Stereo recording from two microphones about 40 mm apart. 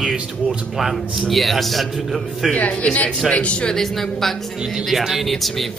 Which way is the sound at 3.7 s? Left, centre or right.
Centre.